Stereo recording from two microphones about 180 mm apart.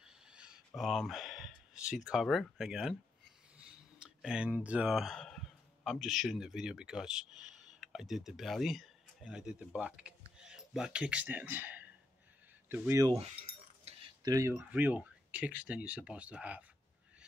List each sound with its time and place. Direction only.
0.0 s a sound: 5° right (ahead or behind)
0.7 s speech: centre (ahead or behind)
3.5 s a sound: 5° right (ahead or behind)
5.9 s speech: centre (ahead or behind)
13.1 s keys jangling: 35° right (ahead or behind)
14.2 s speech: 15° right (ahead or behind)